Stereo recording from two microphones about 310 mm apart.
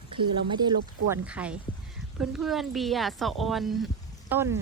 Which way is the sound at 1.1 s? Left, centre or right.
Centre.